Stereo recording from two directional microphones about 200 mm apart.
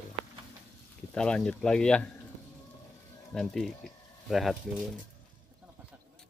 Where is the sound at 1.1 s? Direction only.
5° left (ahead or behind).